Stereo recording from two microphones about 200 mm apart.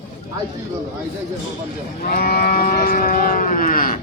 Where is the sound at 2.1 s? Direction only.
50° left (ahead or behind).